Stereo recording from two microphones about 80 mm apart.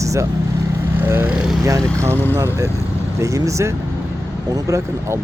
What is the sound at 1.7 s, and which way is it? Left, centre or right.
Speech, right.